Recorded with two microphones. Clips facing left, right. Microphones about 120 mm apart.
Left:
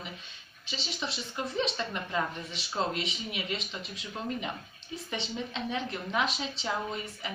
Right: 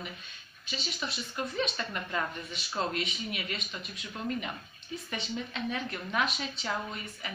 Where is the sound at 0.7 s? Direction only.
25° left (ahead or behind).